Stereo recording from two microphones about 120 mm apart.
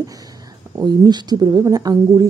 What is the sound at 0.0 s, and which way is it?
Speech, 30° right (ahead or behind).